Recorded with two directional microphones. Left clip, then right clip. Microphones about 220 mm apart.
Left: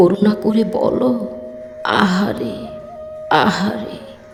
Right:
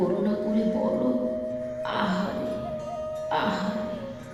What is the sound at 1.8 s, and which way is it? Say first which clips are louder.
Speech: left 14 dB; 55° left (ahead or behind).